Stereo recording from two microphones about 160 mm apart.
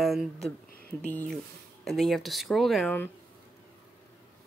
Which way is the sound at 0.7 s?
70° left (ahead or behind).